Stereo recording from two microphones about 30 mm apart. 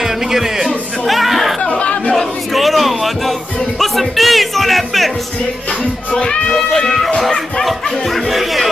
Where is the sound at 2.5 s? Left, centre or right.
Centre.